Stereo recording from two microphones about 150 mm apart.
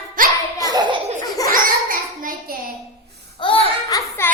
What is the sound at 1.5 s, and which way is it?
Child singing, 65° right (ahead or behind).